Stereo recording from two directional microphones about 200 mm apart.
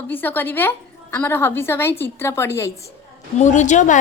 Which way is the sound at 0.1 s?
10° left (ahead or behind).